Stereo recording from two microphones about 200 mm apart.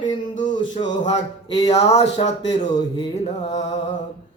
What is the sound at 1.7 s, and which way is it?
Speech, 30° left (ahead or behind).